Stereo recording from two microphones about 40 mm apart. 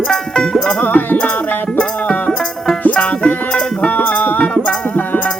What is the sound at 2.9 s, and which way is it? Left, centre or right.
Music, left.